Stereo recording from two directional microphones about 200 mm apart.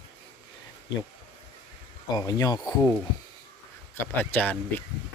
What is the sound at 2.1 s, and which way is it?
Speech, 20° left (ahead or behind).